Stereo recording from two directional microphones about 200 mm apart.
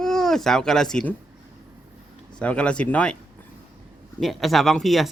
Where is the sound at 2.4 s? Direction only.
5° left (ahead or behind).